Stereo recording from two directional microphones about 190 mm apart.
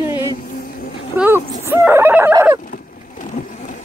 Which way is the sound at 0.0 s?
15° right (ahead or behind).